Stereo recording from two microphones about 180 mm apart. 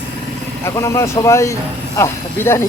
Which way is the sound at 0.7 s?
15° left (ahead or behind).